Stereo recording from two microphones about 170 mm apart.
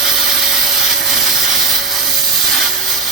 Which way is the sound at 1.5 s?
Centre (ahead or behind).